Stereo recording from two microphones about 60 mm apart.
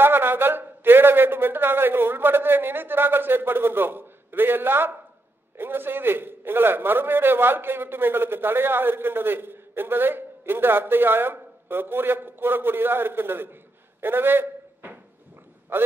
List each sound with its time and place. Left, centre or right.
0.0 s a man's voice: right
14.0 s a sound: right
15.7 s a man's voice: right